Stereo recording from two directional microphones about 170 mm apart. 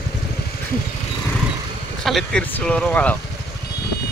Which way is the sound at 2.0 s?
Centre (ahead or behind).